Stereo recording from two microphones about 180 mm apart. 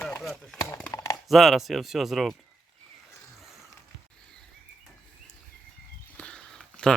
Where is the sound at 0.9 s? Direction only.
20° left (ahead or behind).